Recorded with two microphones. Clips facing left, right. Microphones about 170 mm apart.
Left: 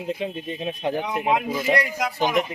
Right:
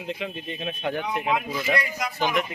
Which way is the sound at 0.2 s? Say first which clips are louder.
Left 4 dB; 30° left (ahead or behind).